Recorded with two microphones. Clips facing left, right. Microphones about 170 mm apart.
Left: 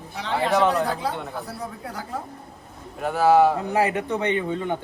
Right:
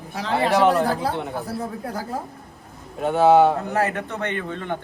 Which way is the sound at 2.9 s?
25° right (ahead or behind).